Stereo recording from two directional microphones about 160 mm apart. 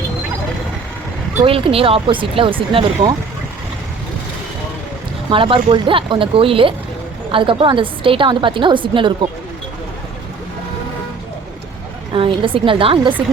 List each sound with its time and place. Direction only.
1.5 s a woman's voice: 35° right (ahead or behind)
5.3 s a woman's voice: 35° right (ahead or behind)
12.1 s a woman's voice: 35° right (ahead or behind)